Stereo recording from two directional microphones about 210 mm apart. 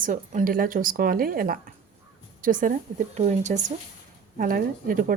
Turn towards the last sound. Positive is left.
turn(degrees=-40)  # may be behind; listen again after turning